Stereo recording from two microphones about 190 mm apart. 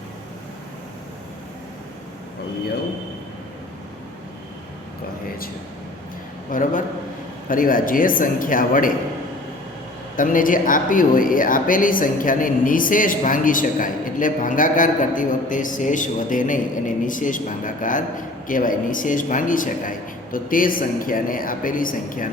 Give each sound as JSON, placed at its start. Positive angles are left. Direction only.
{"t": 6.5, "sound": "speech", "side_deg": 45}
{"t": 10.2, "sound": "speech", "side_deg": 45}